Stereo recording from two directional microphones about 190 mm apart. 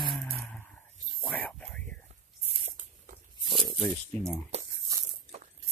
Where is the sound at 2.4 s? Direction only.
30° right (ahead or behind).